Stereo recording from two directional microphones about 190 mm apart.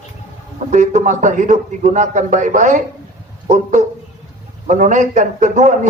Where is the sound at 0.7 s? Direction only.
40° right (ahead or behind).